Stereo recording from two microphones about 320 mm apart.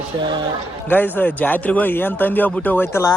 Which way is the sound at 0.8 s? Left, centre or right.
Centre.